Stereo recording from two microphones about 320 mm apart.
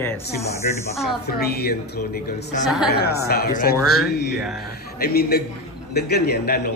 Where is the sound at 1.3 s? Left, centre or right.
Left.